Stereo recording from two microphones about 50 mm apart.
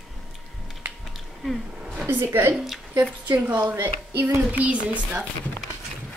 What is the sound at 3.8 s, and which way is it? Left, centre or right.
Speech, right.